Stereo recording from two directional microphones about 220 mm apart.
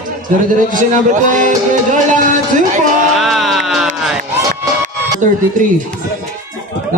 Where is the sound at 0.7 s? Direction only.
35° right (ahead or behind).